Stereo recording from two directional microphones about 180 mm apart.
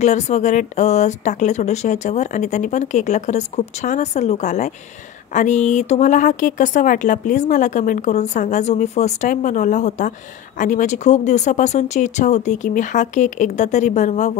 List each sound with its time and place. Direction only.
0.0 s a woman's voice: 40° left (ahead or behind)